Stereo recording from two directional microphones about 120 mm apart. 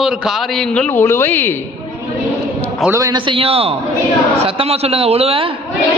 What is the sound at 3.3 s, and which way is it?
A man's voice, 50° right (ahead or behind).